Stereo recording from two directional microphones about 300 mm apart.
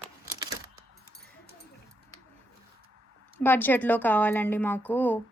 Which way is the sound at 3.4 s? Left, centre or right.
Centre.